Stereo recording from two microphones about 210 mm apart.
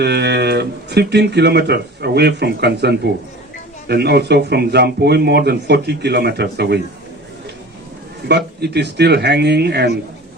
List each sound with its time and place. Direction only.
0.0 s speech: 55° right (ahead or behind)
8.3 s speech: 50° right (ahead or behind)